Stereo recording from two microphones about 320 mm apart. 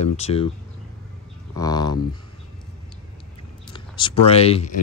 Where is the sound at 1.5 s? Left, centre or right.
Centre.